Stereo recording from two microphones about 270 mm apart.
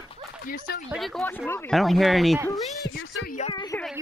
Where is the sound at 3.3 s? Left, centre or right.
Left.